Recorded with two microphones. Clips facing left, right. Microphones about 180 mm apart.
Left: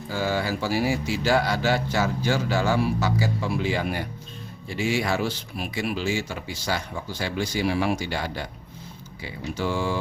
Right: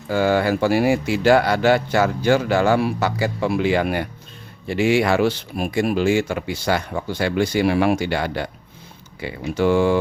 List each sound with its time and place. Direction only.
0.1 s speech: 60° right (ahead or behind)
5.6 s speech: 45° right (ahead or behind)